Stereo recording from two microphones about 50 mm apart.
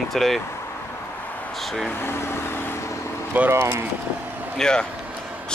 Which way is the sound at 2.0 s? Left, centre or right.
Left.